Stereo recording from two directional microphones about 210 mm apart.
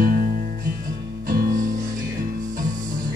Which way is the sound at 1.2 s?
40° right (ahead or behind).